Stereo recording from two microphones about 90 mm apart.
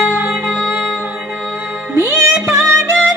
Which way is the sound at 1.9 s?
30° right (ahead or behind).